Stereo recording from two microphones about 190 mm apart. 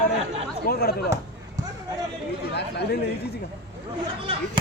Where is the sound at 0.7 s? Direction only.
55° left (ahead or behind).